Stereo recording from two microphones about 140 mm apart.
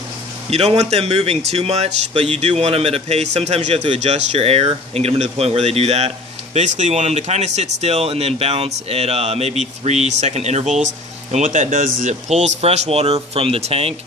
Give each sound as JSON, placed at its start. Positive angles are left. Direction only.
{"t": 0.5, "sound": "speech", "side_deg": -45}